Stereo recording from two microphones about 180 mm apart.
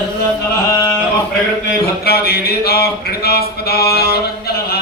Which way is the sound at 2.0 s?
60° left (ahead or behind).